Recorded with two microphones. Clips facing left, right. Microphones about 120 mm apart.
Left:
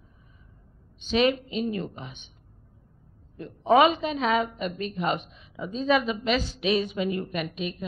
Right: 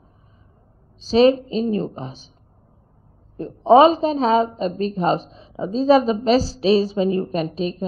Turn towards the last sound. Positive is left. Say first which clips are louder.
# right 8 dB
turn(degrees=-35)  # may be behind; listen again after turning